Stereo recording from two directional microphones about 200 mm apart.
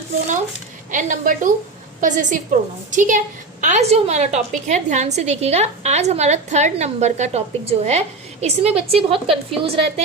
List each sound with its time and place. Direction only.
0.9 s a woman's voice: 40° right (ahead or behind)